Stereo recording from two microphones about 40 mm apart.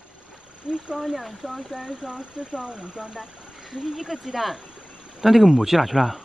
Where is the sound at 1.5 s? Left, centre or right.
Right.